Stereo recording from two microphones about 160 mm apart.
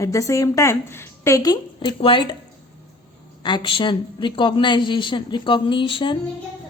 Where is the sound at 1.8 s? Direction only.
35° left (ahead or behind).